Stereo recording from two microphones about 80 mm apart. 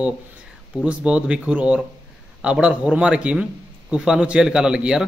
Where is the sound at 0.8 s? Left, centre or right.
Centre.